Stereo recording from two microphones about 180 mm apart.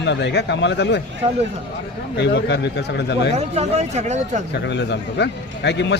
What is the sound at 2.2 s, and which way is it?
A man's voice, 75° left (ahead or behind).